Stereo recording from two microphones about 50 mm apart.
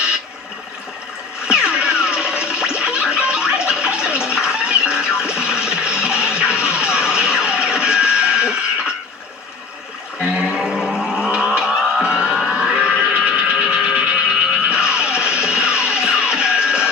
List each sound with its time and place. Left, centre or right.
1.5 s music: centre
10.2 s a sound: centre
13.9 s music: right